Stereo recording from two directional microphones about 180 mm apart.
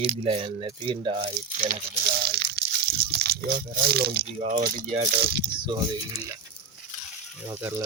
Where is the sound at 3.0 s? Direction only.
65° right (ahead or behind).